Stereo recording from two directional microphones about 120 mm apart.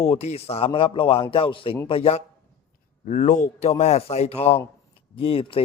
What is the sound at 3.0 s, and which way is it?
Speech, 85° left.